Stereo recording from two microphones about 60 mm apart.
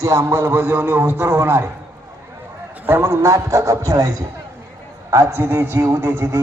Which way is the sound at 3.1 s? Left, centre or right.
Right.